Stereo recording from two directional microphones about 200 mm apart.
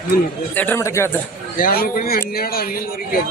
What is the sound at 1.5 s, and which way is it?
A man's voice, 45° left (ahead or behind).